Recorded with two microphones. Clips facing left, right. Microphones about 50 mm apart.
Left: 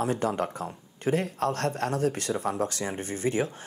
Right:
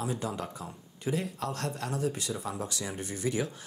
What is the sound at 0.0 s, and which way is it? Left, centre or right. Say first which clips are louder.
Speech: left 7 dB; left.